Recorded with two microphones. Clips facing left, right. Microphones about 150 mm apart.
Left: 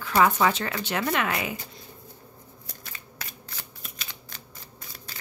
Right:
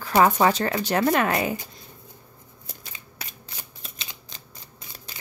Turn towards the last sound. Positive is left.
turn(degrees=-20)  # may be behind; listen again after turning